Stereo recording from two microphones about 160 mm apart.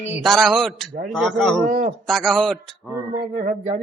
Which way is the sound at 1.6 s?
55° right (ahead or behind).